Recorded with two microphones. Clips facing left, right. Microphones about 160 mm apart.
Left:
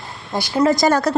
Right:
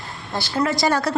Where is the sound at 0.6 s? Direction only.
45° left (ahead or behind).